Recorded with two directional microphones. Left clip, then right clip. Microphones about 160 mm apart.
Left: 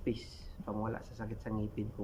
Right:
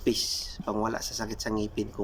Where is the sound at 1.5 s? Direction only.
10° right (ahead or behind).